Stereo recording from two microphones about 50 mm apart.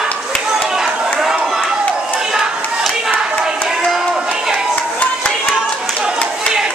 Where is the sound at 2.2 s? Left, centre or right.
Centre.